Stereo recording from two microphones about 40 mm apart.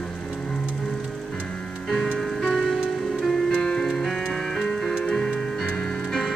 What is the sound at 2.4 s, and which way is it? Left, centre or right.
Music, centre.